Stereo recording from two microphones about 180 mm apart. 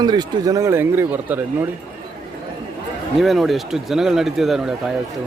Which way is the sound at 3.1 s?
Centre (ahead or behind).